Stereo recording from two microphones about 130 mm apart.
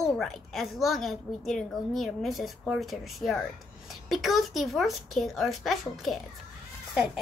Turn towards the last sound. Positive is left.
turn(degrees=0)  # may be behind; listen again after turning